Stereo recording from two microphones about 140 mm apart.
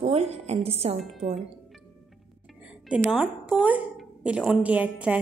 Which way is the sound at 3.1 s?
10° right (ahead or behind).